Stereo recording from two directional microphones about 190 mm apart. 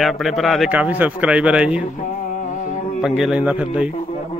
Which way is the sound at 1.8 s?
40° left (ahead or behind).